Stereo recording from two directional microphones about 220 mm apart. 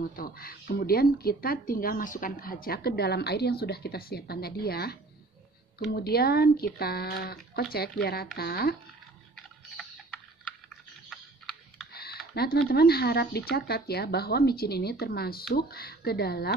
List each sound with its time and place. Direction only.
0.0 s speech: 40° left (ahead or behind)
5.9 s speech: 45° left (ahead or behind)
11.1 s a sound: centre (ahead or behind)
12.4 s speech: 45° left (ahead or behind)